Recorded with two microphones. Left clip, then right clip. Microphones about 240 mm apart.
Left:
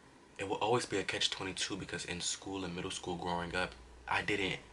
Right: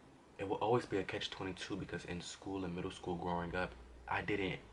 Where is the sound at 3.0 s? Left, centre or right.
Right.